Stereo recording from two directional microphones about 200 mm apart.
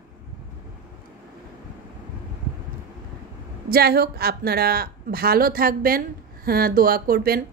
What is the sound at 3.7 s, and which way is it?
Speech, 50° right (ahead or behind).